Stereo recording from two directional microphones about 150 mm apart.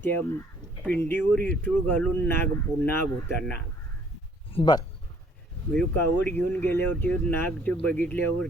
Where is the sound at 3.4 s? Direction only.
10° left (ahead or behind).